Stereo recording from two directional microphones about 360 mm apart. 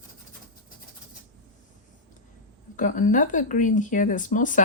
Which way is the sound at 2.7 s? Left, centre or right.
Left.